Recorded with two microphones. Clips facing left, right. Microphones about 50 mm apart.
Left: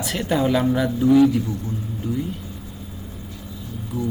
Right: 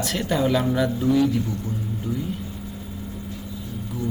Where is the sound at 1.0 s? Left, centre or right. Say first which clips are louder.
Left 7 dB; left.